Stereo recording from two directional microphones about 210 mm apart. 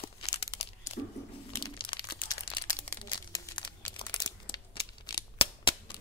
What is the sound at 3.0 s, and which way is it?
Crumpling, 20° left (ahead or behind).